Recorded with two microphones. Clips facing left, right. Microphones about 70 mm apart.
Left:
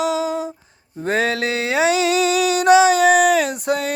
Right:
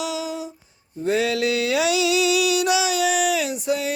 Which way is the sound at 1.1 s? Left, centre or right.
Left.